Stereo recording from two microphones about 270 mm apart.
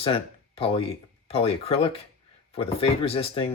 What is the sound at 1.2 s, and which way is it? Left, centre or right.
Speech, left.